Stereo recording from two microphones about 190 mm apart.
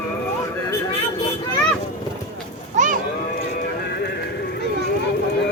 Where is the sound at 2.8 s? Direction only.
40° right (ahead or behind).